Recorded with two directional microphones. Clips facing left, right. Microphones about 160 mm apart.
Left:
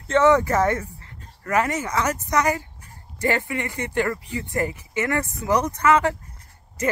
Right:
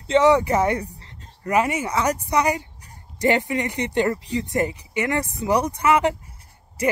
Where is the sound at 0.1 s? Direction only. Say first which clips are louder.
Right 1 dB; 15° right (ahead or behind).